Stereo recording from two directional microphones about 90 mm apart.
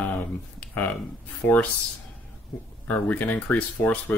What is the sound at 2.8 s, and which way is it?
Speech, 20° left (ahead or behind).